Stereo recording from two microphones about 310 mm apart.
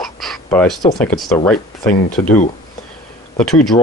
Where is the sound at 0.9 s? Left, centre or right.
Centre.